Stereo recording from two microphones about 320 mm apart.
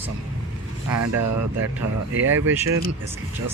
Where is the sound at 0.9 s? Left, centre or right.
Right.